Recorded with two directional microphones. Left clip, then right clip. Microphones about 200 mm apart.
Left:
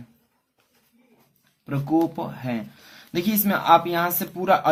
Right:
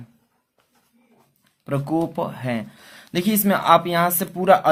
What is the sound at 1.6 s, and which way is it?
Speech, 45° right (ahead or behind).